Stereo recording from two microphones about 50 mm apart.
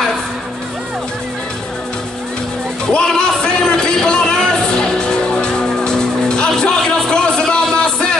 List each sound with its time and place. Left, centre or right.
3.2 s music: centre